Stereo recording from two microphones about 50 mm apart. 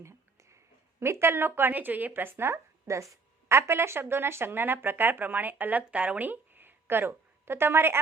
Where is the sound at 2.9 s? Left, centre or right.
Right.